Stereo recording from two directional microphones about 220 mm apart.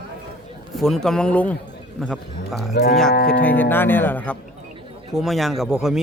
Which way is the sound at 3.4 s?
10° left (ahead or behind).